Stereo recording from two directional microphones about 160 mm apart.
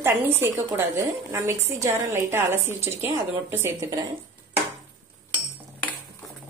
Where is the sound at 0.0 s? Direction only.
15° right (ahead or behind).